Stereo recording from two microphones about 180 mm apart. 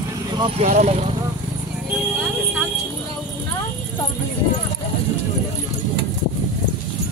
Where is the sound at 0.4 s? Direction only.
35° right (ahead or behind).